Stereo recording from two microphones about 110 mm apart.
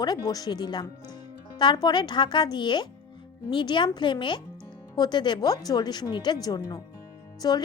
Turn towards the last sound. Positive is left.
turn(degrees=40)  # may be behind; listen again after turning